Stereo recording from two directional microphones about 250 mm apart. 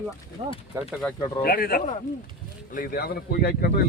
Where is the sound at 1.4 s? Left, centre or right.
Left.